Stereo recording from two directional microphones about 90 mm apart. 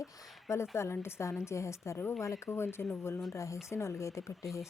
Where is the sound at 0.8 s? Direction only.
30° left (ahead or behind).